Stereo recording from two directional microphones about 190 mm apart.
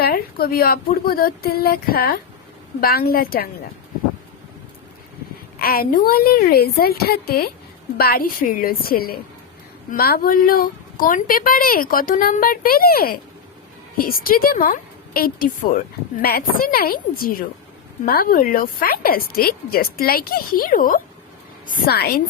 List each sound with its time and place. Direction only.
0.0 s a woman's voice: 55° left (ahead or behind)
5.5 s a woman's voice: 50° left (ahead or behind)
14.3 s a woman's voice: 50° left (ahead or behind)